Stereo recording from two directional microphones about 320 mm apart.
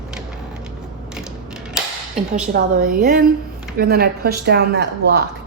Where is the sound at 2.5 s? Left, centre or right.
Right.